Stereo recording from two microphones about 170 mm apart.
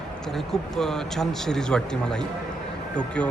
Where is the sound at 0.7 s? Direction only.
Centre (ahead or behind).